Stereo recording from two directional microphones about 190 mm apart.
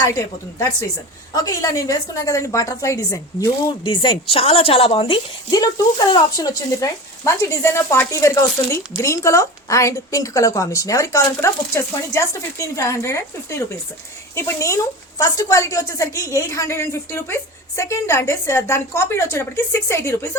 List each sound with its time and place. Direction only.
1.3 s a woman's voice: 20° left (ahead or behind)